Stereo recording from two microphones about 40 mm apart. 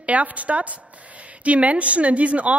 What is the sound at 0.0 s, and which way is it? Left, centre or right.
A woman's voice, right.